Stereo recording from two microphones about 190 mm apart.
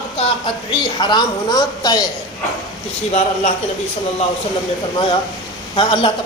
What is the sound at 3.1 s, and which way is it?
Speech, 35° left (ahead or behind).